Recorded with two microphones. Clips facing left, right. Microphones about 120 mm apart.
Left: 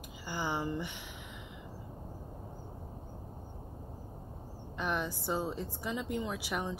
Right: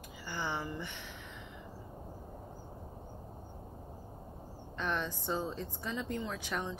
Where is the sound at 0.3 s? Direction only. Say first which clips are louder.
Left 3 dB; 15° left (ahead or behind).